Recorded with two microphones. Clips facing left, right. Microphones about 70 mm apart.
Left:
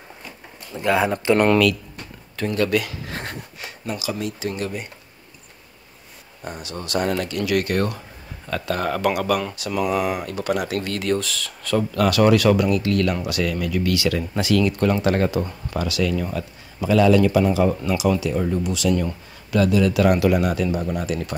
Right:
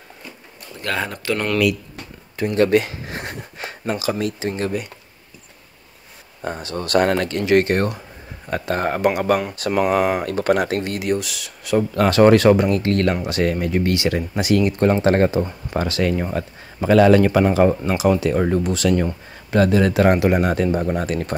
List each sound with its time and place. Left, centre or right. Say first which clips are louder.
0.7 s speech: left 5 dB; centre
2.5 s speech: right 5 dB; right
3.5 s a sound: right 8 dB; right
4.4 s speech: right 3 dB; right
6.4 s speech: right 6 dB; right
9.6 s speech: right 4 dB; right
11.0 s speech: right 1 dB; centre
11.9 s speech: right 4 dB; right